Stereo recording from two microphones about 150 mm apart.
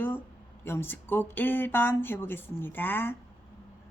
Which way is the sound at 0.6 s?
15° left (ahead or behind).